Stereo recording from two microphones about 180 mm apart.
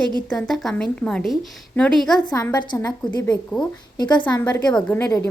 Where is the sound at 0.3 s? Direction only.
5° left (ahead or behind).